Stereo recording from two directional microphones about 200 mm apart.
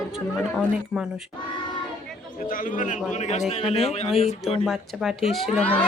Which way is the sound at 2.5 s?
45° left (ahead or behind).